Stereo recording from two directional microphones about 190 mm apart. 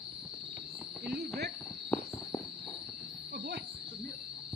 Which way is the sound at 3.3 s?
60° right (ahead or behind).